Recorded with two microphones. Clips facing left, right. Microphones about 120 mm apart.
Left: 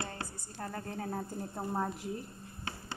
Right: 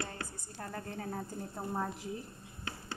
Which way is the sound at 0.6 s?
5° left (ahead or behind).